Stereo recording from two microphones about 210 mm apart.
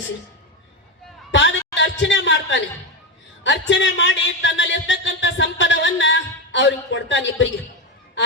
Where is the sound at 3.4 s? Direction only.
60° left (ahead or behind).